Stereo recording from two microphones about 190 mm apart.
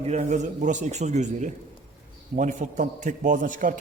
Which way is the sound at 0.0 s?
35° right (ahead or behind).